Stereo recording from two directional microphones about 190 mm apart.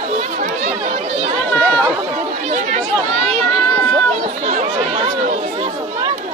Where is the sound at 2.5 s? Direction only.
35° right (ahead or behind).